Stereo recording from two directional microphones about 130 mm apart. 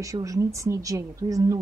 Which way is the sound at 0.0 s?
25° right (ahead or behind).